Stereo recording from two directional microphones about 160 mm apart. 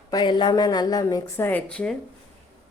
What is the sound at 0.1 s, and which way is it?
Speech, 30° left (ahead or behind).